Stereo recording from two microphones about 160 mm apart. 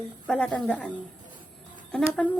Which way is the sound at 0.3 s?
5° left (ahead or behind).